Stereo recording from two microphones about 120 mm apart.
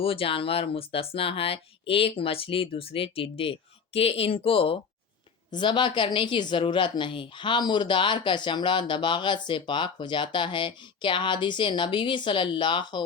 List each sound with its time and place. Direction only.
0.0 s speech: 50° left (ahead or behind)